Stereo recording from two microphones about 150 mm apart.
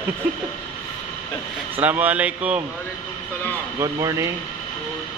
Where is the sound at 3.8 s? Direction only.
20° right (ahead or behind).